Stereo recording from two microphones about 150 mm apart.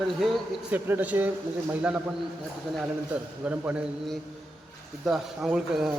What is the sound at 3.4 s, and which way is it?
Speech, 10° right (ahead or behind).